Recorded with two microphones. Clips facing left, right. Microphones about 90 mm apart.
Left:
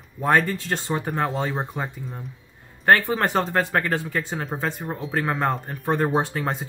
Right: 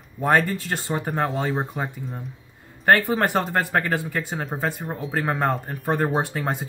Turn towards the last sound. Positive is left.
turn(degrees=-5)  # may be behind; listen again after turning